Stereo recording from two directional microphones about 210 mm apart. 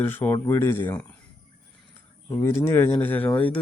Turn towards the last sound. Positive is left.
turn(degrees=10)  # may be behind; listen again after turning